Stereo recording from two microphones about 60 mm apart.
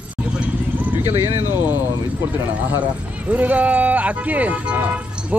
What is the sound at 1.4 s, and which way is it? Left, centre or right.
Speech, left.